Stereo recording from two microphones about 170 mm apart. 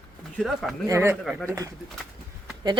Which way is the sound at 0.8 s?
15° right (ahead or behind).